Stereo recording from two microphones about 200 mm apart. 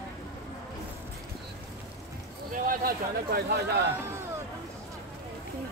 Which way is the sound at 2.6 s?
50° right (ahead or behind).